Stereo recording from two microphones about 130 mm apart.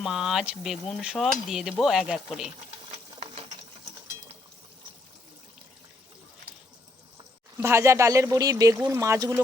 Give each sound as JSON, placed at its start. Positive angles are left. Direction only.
{"t": 0.0, "sound": "stir", "side_deg": -5}
{"t": 2.9, "sound": "ratchet", "side_deg": -55}
{"t": 7.6, "sound": "speech", "side_deg": -20}